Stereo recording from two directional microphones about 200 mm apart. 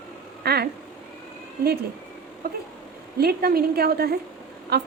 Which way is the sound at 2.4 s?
45° right (ahead or behind).